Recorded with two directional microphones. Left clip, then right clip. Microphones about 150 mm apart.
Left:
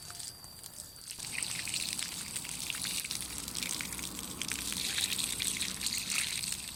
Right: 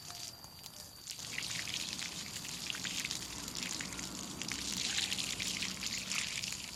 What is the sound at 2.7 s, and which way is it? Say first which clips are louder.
Trickle: left 1 dB; 25° left (ahead or behind).